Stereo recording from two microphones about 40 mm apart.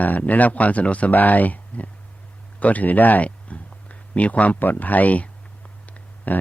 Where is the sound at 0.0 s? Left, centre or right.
Left.